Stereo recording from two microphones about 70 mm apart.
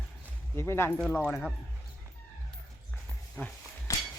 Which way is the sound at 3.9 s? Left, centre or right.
Left.